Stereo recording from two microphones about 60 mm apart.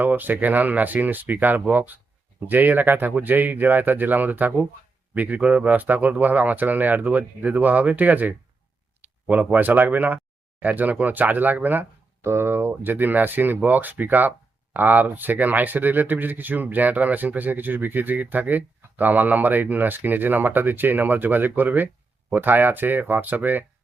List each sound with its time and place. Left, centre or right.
0.0 s speech: right
12.2 s speech: right